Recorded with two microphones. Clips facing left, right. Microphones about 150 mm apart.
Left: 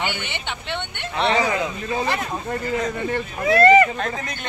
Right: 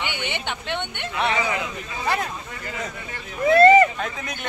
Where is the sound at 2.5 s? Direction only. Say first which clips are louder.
Left 9 dB; 50° left (ahead or behind).